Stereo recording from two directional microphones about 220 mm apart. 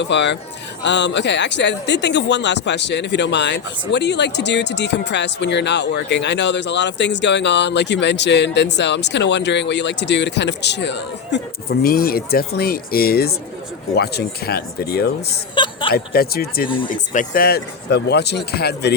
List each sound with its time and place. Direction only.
0.0 s speech: 55° left (ahead or behind)
15.5 s a woman's voice: 20° left (ahead or behind)
15.9 s speech: 45° left (ahead or behind)